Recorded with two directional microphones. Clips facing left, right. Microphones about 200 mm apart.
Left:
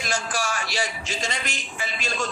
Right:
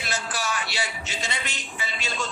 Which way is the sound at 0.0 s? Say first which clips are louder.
Left 3 dB; 45° left (ahead or behind).